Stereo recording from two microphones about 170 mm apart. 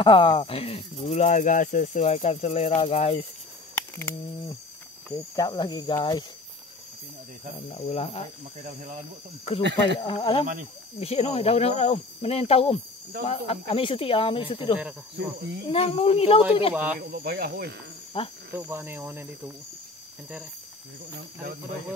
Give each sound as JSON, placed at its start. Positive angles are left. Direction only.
{"t": 0.0, "sound": "speech", "side_deg": 30}
{"t": 5.1, "sound": "speech", "side_deg": 20}
{"t": 7.7, "sound": "speech", "side_deg": 35}
{"t": 8.6, "sound": "speech", "side_deg": -50}
{"t": 9.6, "sound": "cricket", "side_deg": -90}
{"t": 9.9, "sound": "speech", "side_deg": 30}
{"t": 15.1, "sound": "cricket", "side_deg": -90}
{"t": 15.7, "sound": "speech", "side_deg": 35}
{"t": 16.7, "sound": "speech", "side_deg": -10}
{"t": 17.1, "sound": "speech", "side_deg": -65}
{"t": 18.1, "sound": "speech", "side_deg": 30}
{"t": 18.5, "sound": "speech", "side_deg": -15}